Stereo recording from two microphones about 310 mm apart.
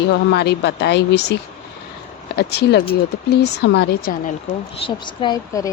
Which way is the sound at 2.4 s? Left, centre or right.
Left.